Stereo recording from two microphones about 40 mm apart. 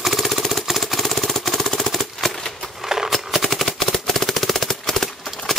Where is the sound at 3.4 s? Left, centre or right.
Centre.